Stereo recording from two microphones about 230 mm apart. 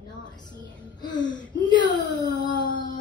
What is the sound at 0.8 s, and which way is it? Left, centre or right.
Speech, centre.